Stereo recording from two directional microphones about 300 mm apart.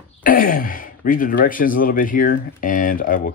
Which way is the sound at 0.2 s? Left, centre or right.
Left.